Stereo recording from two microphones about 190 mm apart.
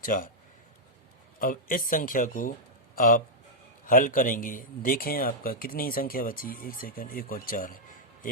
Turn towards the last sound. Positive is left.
turn(degrees=45)  # may be behind; listen again after turning